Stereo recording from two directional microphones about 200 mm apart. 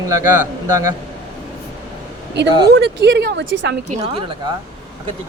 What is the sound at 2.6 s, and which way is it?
Speech, 55° right (ahead or behind).